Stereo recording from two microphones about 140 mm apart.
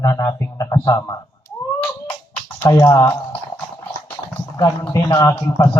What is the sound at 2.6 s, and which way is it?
Speech, 20° left (ahead or behind).